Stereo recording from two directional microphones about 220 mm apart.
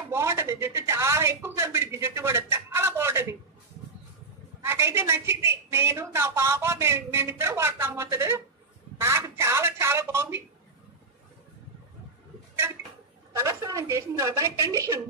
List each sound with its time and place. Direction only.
0.1 s speech: 10° right (ahead or behind)
4.6 s a woman's voice: 10° right (ahead or behind)
13.3 s a woman's voice: 10° right (ahead or behind)